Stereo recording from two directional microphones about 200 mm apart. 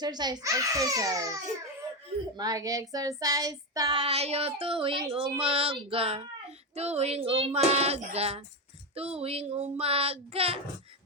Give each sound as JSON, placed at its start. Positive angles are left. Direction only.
{"t": 0.0, "sound": "a child's voice", "side_deg": -20}
{"t": 2.9, "sound": "child singing", "side_deg": -20}
{"t": 6.7, "sound": "speech", "side_deg": -30}
{"t": 9.0, "sound": "child singing", "side_deg": -30}